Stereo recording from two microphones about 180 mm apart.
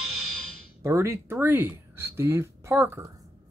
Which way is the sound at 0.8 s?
15° right (ahead or behind).